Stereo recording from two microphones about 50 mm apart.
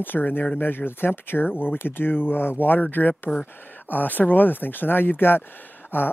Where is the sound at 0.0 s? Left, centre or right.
Left.